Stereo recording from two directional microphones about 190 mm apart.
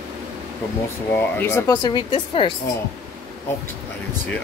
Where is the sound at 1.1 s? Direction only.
10° left (ahead or behind); by 2.5 s 25° left (ahead or behind).